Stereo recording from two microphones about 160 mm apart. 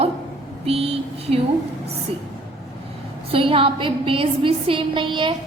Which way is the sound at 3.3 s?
35° right (ahead or behind).